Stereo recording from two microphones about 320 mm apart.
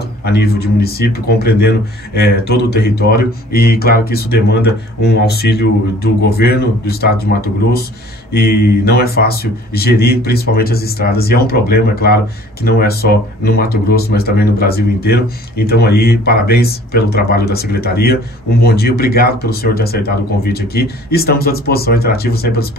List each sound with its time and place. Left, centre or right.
0.2 s speech: left